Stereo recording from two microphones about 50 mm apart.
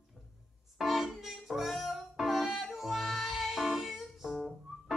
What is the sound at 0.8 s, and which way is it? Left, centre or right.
Music, centre.